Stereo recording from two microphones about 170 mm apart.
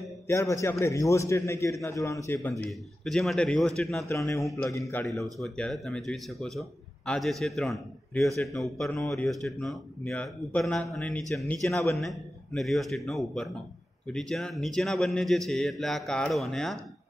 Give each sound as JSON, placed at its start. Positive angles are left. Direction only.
{"t": 0.3, "sound": "a man's voice", "side_deg": 15}
{"t": 4.6, "sound": "a man's voice", "side_deg": 20}
{"t": 5.0, "sound": "speech", "side_deg": 0}